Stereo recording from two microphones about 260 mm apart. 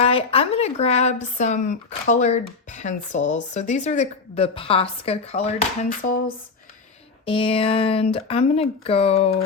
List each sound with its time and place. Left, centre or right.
0.0 s speech: left